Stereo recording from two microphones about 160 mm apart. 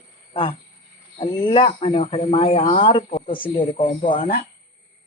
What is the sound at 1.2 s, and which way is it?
Speech, 30° left (ahead or behind).